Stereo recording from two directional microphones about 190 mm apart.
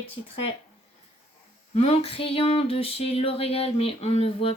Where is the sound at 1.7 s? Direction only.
30° left (ahead or behind).